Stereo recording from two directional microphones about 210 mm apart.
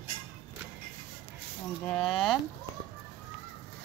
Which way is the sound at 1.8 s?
5° left (ahead or behind).